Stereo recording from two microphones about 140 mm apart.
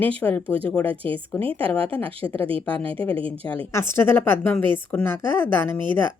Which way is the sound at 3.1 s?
40° right (ahead or behind).